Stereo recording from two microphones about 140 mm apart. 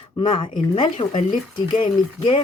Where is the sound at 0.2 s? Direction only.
35° left (ahead or behind).